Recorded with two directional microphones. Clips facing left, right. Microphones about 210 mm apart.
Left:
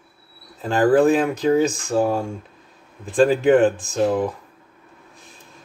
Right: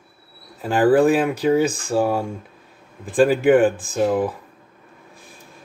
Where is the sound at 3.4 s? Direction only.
5° right (ahead or behind).